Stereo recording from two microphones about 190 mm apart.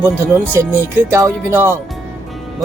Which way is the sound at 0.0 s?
10° right (ahead or behind).